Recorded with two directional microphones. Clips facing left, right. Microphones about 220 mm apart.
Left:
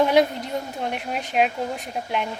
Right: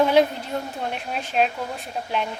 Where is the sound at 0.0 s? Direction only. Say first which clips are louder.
Even; 15° left (ahead or behind).